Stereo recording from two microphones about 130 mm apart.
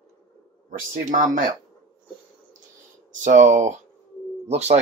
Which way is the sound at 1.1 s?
90° right.